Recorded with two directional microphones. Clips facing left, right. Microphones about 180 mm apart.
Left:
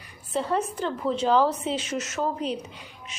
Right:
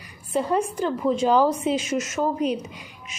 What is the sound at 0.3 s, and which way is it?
A woman's voice, 10° right (ahead or behind).